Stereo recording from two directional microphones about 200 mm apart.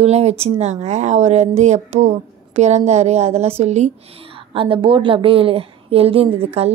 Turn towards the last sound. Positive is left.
turn(degrees=-30)  # may be behind; listen again after turning